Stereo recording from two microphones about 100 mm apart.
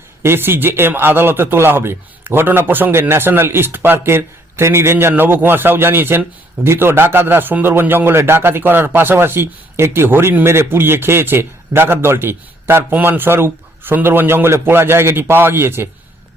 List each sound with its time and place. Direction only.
0.2 s speech: 25° right (ahead or behind)